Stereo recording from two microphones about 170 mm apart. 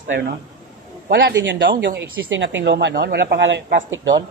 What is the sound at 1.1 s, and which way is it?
Speech, 90° right.